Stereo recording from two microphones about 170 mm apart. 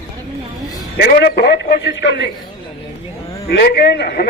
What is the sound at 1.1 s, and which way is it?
A man's voice, 65° left (ahead or behind).